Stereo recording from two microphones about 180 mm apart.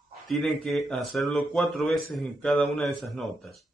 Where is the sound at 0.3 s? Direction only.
Centre (ahead or behind).